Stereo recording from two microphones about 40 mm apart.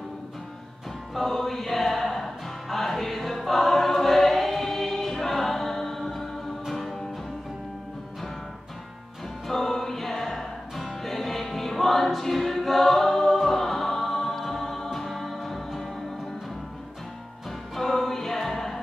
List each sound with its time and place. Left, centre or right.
1.1 s music: centre
9.5 s music: centre
17.5 s music: centre